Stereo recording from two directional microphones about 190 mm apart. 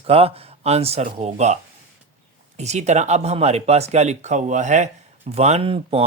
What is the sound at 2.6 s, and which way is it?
Speech, 35° right (ahead or behind).